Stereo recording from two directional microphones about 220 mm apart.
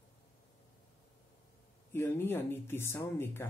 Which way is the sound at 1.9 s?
10° left (ahead or behind).